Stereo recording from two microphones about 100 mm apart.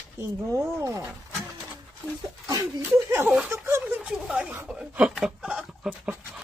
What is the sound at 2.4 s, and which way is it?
Speech, 35° right (ahead or behind).